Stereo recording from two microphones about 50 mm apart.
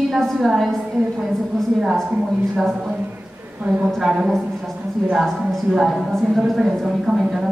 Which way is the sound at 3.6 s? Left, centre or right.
Right.